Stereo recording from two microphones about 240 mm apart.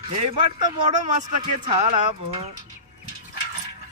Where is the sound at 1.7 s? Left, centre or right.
Right.